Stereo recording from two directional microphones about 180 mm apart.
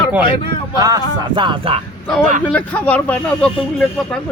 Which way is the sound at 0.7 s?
20° right (ahead or behind).